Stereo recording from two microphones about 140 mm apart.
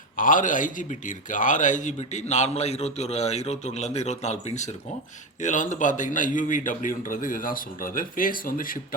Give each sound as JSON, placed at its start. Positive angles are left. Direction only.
{"t": 0.2, "sound": "a man's voice", "side_deg": 70}